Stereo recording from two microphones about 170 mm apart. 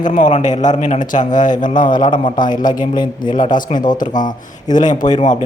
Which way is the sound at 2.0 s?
25° left (ahead or behind).